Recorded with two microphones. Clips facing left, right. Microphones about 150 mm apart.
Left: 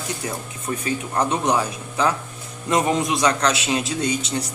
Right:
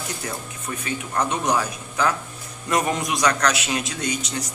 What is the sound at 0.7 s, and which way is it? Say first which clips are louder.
Speech: left 4 dB; 30° left (ahead or behind).